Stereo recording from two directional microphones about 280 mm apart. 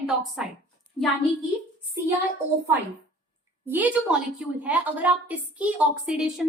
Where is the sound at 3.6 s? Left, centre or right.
Centre.